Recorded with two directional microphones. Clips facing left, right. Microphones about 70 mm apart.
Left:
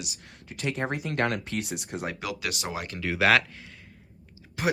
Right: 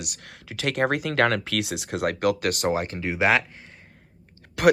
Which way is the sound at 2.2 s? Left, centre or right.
Right.